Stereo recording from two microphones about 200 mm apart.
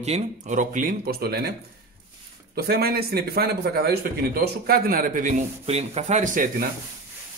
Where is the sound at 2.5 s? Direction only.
50° right (ahead or behind).